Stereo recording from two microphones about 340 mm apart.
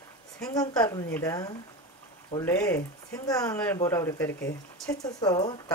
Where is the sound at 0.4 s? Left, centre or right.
Centre.